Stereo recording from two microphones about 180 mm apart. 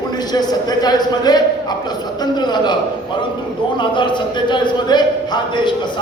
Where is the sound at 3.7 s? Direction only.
25° left (ahead or behind).